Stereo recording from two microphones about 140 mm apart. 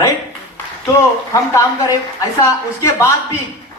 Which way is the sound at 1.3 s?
25° left (ahead or behind).